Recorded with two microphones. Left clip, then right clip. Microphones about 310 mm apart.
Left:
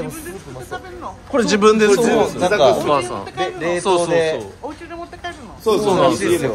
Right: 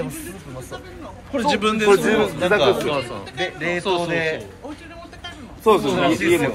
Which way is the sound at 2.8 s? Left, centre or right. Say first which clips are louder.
Left 6 dB; centre.